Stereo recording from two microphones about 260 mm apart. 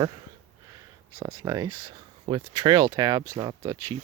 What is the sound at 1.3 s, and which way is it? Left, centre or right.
Speech, centre.